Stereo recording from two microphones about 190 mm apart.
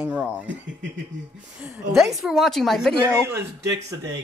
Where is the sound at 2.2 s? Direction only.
Centre (ahead or behind).